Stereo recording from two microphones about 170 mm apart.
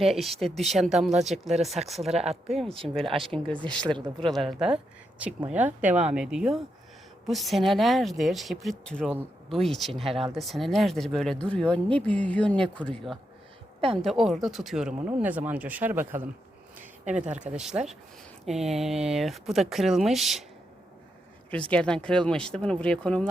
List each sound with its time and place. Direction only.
0.0 s speech: centre (ahead or behind)
1.5 s speech: 40° right (ahead or behind)
1.9 s speech: centre (ahead or behind)
2.1 s speech: 40° right (ahead or behind)
2.5 s speech: centre (ahead or behind)
17.1 s speech: 45° right (ahead or behind)
17.3 s speech: 5° right (ahead or behind)
21.5 s speech: 5° left (ahead or behind)